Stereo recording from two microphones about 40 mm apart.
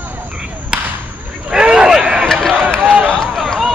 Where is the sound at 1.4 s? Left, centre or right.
Centre.